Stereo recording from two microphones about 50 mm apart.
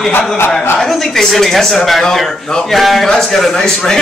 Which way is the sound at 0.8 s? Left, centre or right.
Centre.